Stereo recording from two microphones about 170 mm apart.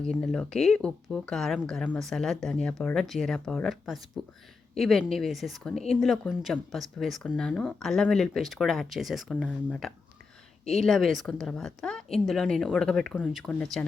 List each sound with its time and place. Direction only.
0.0 s speech: 5° left (ahead or behind)
5.7 s speech: 40° left (ahead or behind)
6.0 s speech: centre (ahead or behind)